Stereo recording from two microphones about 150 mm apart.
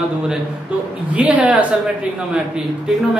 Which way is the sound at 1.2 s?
10° right (ahead or behind).